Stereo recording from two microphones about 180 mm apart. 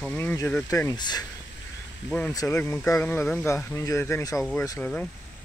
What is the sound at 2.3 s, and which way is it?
Speech, 15° left (ahead or behind).